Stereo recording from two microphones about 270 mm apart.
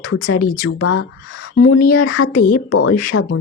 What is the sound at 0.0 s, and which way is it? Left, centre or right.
A woman's voice, left.